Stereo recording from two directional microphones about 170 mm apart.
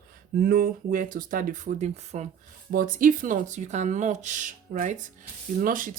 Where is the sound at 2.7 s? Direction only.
55° right (ahead or behind).